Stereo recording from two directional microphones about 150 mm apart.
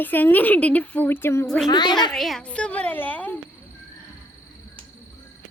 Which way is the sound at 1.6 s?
30° left (ahead or behind).